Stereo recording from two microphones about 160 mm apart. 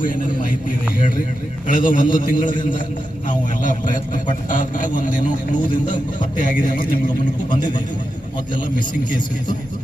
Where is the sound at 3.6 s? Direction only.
55° left (ahead or behind).